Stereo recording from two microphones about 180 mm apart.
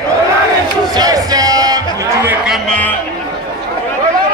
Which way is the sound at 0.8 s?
20° right (ahead or behind).